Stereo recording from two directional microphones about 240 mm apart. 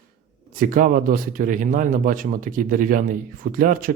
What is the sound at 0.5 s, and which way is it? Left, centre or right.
Speech, right.